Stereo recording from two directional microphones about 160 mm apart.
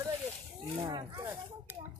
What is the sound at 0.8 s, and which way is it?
Speech, 30° right (ahead or behind).